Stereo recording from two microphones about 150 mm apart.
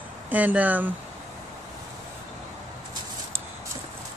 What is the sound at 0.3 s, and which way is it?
Speech, 10° right (ahead or behind).